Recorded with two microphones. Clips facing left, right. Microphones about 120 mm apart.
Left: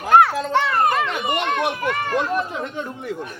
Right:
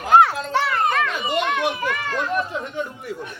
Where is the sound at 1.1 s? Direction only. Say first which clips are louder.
Even; 60° left (ahead or behind).